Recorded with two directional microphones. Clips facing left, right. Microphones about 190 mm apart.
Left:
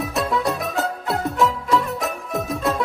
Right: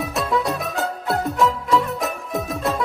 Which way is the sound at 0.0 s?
Centre (ahead or behind).